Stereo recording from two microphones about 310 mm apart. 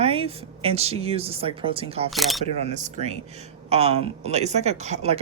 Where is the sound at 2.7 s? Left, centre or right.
Right.